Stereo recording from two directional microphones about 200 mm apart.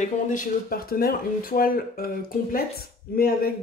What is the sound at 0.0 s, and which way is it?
Speech, 40° left (ahead or behind).